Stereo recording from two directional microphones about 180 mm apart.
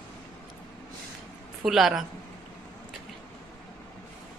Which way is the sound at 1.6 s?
Centre (ahead or behind).